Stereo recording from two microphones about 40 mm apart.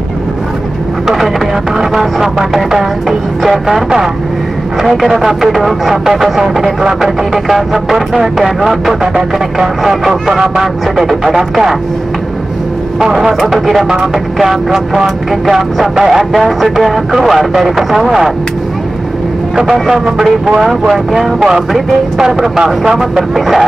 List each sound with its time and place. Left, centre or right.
1.0 s vehicle: centre
1.8 s speech: centre
13.0 s speech: centre
20.2 s speech: right
20.6 s speech: centre
22.2 s speech: centre